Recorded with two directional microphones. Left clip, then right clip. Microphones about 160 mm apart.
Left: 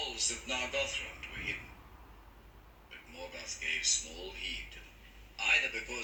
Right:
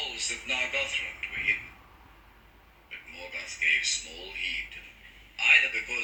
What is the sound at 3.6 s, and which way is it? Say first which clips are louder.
Speech: right 8 dB; 50° left (ahead or behind).